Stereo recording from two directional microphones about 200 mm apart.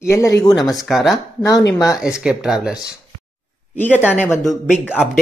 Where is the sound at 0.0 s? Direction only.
15° left (ahead or behind).